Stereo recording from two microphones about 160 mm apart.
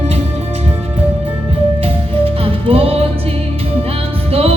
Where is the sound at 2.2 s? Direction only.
35° right (ahead or behind).